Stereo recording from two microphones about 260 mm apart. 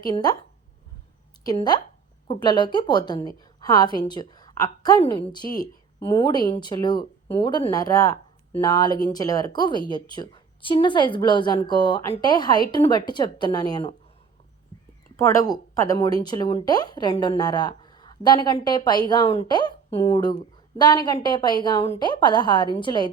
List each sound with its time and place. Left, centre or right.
0.0 s speech: centre
1.5 s speech: centre
15.1 s speech: centre